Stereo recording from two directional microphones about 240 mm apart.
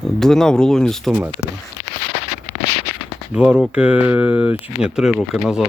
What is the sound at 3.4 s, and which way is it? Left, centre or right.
Speech, centre.